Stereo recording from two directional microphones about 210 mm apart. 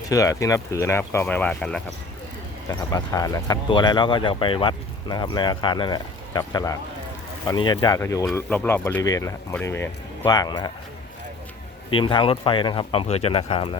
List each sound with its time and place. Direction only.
0.1 s speech: 15° left (ahead or behind)
2.9 s speech: 15° left (ahead or behind)
11.9 s speech: 25° left (ahead or behind)